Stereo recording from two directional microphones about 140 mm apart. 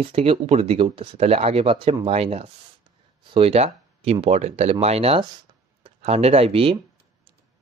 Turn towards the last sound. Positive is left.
turn(degrees=-45)  # may be behind; listen again after turning